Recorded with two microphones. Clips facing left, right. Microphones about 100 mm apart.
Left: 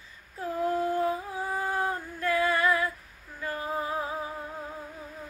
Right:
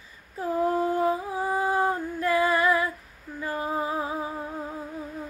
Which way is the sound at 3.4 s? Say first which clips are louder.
Right 3 dB; 25° right (ahead or behind).